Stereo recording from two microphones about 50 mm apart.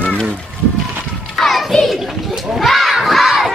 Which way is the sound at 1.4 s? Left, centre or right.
Centre.